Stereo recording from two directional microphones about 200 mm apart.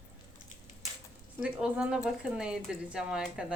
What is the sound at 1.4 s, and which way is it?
A woman's voice, 5° right (ahead or behind).